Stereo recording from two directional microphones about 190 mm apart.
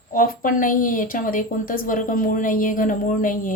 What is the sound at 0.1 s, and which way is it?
A woman's voice, 45° left (ahead or behind).